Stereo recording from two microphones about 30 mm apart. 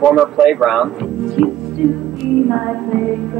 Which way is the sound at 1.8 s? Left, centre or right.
Centre.